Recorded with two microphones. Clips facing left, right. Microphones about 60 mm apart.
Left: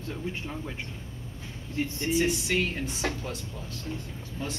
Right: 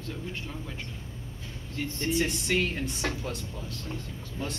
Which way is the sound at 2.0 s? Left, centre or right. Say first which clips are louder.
Left 1 dB; centre.